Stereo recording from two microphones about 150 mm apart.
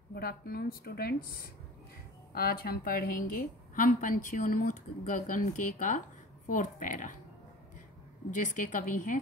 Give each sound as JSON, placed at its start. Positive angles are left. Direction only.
{"t": 0.1, "sound": "a woman's voice", "side_deg": 90}
{"t": 2.3, "sound": "a woman's voice", "side_deg": 85}
{"t": 8.4, "sound": "a woman's voice", "side_deg": 55}